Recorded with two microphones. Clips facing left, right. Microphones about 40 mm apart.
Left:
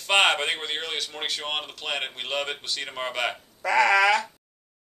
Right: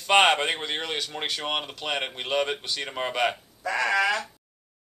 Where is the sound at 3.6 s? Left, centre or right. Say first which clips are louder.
Left 4 dB; left.